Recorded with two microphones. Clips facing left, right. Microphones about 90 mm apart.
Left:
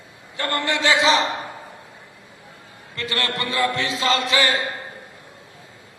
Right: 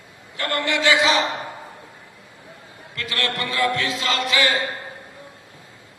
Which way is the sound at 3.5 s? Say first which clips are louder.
Right 1 dB; 30° left (ahead or behind).